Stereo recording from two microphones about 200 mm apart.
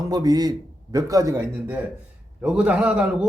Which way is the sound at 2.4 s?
5° right (ahead or behind).